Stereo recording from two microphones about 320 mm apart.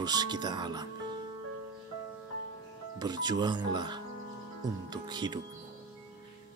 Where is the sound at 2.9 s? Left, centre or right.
Centre.